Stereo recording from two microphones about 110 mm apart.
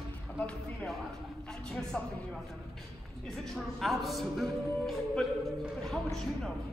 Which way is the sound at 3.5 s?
Centre (ahead or behind).